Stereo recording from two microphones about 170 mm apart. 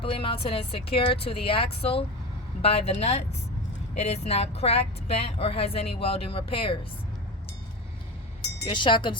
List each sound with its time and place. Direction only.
0.0 s speech: 30° left (ahead or behind)
8.6 s speech: 30° left (ahead or behind)